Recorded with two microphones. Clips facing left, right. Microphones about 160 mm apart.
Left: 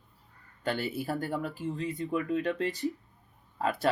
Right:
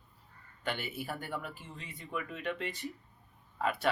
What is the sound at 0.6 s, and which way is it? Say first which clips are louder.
A man's voice: left 6 dB; 40° left (ahead or behind).